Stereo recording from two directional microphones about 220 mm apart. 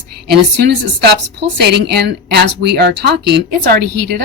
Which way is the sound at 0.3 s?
45° right (ahead or behind).